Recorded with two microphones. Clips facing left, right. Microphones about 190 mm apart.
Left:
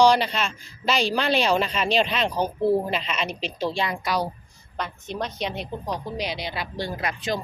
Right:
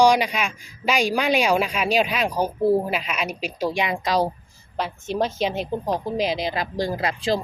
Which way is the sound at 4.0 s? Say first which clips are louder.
Right 6 dB; 90° right.